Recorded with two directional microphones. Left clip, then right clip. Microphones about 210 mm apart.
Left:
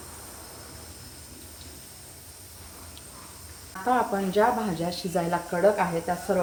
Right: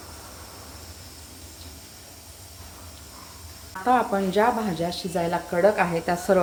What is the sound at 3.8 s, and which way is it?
Speech, 20° right (ahead or behind).